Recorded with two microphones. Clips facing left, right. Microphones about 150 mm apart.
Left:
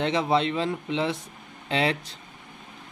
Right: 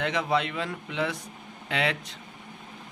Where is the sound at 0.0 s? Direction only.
30° left (ahead or behind).